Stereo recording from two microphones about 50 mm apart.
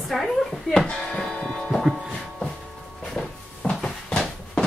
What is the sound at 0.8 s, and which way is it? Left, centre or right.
Music, centre.